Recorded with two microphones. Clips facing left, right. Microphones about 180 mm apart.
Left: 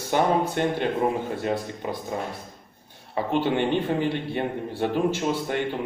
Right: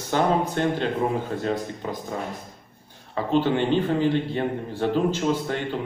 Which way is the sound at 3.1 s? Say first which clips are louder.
Right 2 dB; 15° left (ahead or behind).